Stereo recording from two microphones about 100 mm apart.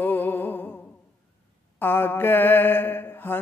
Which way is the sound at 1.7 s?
20° left (ahead or behind).